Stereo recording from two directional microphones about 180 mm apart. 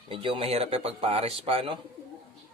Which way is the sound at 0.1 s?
30° right (ahead or behind).